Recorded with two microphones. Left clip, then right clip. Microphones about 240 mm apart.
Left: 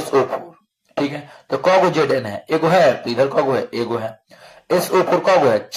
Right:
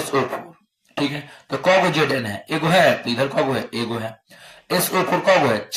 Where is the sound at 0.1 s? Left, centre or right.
Left.